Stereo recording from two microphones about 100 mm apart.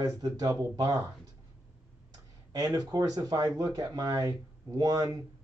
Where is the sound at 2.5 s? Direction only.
35° right (ahead or behind).